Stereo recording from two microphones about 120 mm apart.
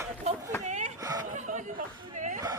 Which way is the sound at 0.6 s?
90° right.